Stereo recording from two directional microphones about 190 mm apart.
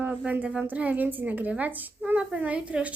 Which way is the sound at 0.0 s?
10° right (ahead or behind).